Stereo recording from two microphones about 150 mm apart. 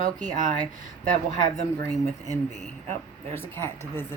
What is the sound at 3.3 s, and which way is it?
Speech, 15° left (ahead or behind).